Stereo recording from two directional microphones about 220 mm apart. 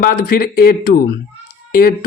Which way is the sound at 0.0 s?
40° left (ahead or behind).